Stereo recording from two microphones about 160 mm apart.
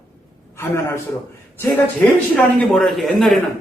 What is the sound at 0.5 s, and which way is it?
Speech, 15° left (ahead or behind).